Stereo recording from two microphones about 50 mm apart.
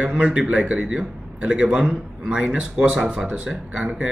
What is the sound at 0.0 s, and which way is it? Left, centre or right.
A man's voice, right.